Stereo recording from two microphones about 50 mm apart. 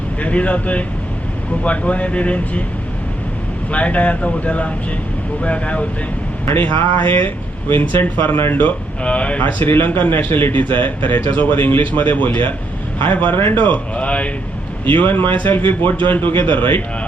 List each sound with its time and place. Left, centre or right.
0.2 s speech: left
3.7 s speech: left
6.5 s speech: left
9.0 s speech: left
9.6 s speech: left
13.9 s speech: left
14.8 s speech: left